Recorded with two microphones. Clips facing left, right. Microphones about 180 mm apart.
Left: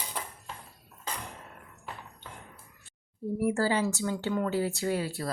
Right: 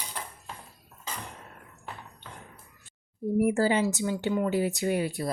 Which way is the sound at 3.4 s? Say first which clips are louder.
Right 3 dB; 15° right (ahead or behind).